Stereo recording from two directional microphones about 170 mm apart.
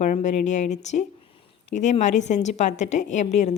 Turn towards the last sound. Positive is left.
turn(degrees=45)  # may be behind; listen again after turning